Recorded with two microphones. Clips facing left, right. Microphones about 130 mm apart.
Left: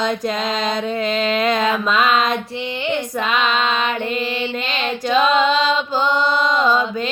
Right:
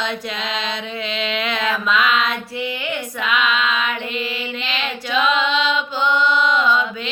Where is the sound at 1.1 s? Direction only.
45° left (ahead or behind).